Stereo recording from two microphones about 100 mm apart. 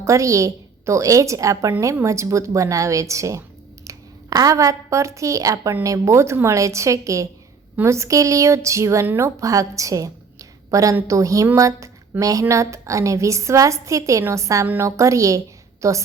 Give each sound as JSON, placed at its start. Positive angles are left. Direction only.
{"t": 0.0, "sound": "a woman's voice", "side_deg": -30}